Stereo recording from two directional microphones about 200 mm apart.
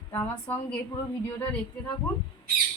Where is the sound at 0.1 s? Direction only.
10° left (ahead or behind).